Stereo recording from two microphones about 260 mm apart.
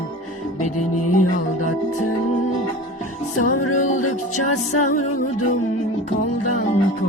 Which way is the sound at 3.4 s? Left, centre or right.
Left.